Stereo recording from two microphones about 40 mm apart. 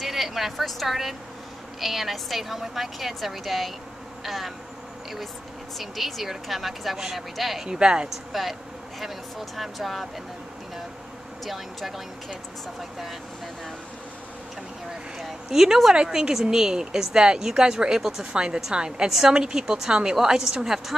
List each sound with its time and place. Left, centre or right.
0.0 s a woman's voice: centre
4.2 s insect: centre
5.8 s a woman's voice: centre
7.6 s a woman's voice: centre
8.3 s a woman's voice: centre
11.4 s a woman's voice: centre
15.1 s a woman's voice: centre